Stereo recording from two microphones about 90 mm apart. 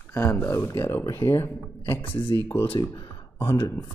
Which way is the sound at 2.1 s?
65° left (ahead or behind).